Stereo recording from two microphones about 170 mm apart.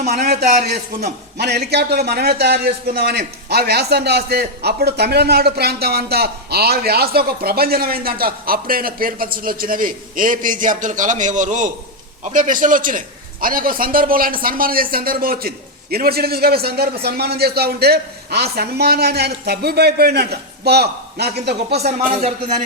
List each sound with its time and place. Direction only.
0.1 s a man's voice: 70° right (ahead or behind)